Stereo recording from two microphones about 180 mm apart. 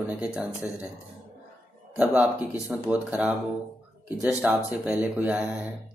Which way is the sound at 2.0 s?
10° right (ahead or behind).